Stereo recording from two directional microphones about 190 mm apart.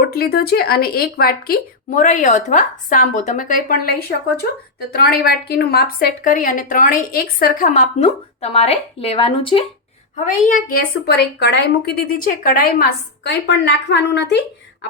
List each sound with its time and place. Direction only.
0.1 s a woman's voice: 55° left (ahead or behind); by 9.6 s 30° left (ahead or behind)
10.2 s a woman's voice: 40° left (ahead or behind); by 14.8 s 65° left (ahead or behind)